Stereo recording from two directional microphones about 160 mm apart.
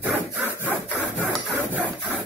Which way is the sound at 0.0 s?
10° right (ahead or behind).